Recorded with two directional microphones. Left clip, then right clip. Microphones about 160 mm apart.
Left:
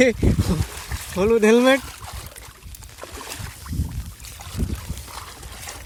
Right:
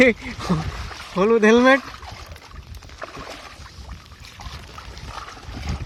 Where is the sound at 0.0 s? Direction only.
15° left (ahead or behind).